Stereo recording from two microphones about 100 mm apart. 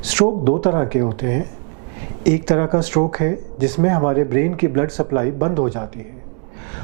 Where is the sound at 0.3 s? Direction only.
20° right (ahead or behind).